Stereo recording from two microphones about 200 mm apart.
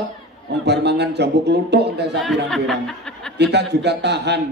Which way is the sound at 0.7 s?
55° right (ahead or behind).